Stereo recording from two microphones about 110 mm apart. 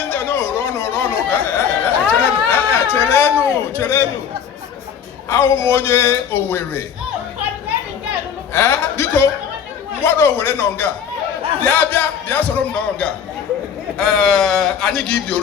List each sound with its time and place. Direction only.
0.1 s a sound: 20° left (ahead or behind)
5.3 s a man's voice: 20° left (ahead or behind)
8.5 s a man's voice: 20° left (ahead or behind)